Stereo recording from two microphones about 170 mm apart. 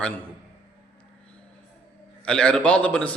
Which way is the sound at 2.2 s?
5° left (ahead or behind).